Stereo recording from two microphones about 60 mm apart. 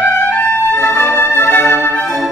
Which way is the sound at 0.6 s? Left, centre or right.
Left.